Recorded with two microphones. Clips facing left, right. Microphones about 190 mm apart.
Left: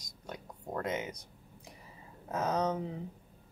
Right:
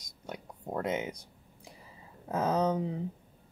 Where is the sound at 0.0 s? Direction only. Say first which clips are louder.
Right 2 dB; 25° right (ahead or behind).